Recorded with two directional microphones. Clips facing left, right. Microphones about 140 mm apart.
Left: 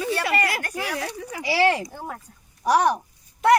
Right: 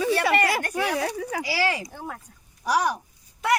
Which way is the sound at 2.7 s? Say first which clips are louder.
Left 4 dB; 60° left (ahead or behind).